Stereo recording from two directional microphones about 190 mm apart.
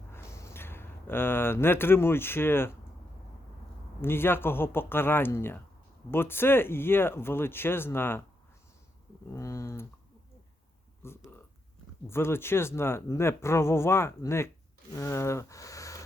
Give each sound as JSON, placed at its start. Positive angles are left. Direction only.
{"t": 0.1, "sound": "speech", "side_deg": 15}
{"t": 4.0, "sound": "speech", "side_deg": 10}
{"t": 9.3, "sound": "speech", "side_deg": 15}
{"t": 11.0, "sound": "speech", "side_deg": 15}